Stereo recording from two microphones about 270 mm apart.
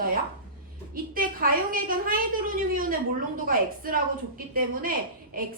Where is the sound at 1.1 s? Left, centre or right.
Right.